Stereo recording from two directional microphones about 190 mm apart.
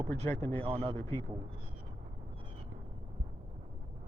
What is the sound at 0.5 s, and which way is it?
Speech, 30° right (ahead or behind).